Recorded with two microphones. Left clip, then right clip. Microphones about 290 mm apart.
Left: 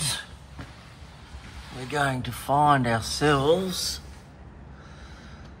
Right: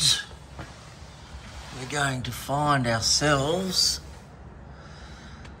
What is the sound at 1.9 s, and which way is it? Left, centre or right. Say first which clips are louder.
Speech: left 2 dB; centre.